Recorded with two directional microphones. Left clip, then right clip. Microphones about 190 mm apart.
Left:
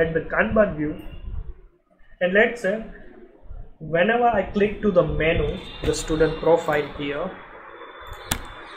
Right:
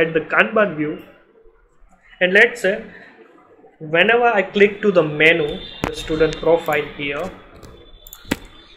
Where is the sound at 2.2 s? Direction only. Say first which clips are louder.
Right 5 dB; 15° right (ahead or behind).